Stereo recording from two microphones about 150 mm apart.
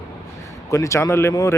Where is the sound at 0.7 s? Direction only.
20° left (ahead or behind).